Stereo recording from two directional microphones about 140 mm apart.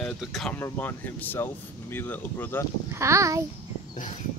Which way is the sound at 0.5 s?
15° left (ahead or behind).